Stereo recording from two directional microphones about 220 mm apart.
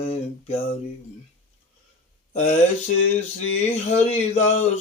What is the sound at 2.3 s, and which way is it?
Mantra, 30° left (ahead or behind).